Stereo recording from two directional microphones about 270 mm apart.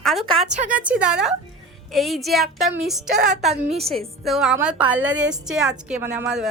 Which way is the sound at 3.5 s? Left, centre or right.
Right.